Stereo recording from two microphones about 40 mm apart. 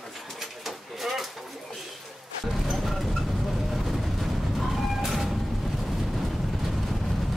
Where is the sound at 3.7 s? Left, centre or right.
Centre.